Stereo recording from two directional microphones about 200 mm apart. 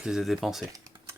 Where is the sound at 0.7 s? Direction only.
15° right (ahead or behind).